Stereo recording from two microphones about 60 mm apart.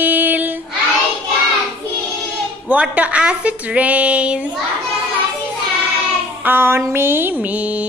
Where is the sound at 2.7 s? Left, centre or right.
Right.